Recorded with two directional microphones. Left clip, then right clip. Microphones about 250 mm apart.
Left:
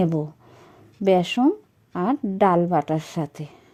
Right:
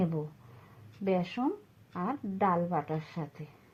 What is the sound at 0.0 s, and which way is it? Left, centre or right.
Speech, left.